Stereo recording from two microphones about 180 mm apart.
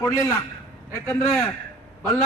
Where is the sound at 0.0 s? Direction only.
15° left (ahead or behind).